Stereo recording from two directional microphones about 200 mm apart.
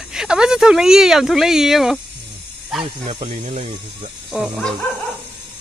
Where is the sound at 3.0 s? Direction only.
30° right (ahead or behind).